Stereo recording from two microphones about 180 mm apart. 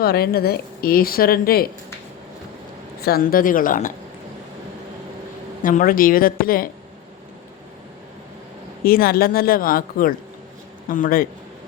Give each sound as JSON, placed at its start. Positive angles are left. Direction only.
{"t": 0.0, "sound": "a woman's voice", "side_deg": 60}
{"t": 3.0, "sound": "speech", "side_deg": 55}
{"t": 5.6, "sound": "speech", "side_deg": 50}
{"t": 8.8, "sound": "a woman's voice", "side_deg": 55}